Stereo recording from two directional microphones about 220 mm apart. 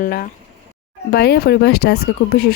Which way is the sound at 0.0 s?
40° left (ahead or behind).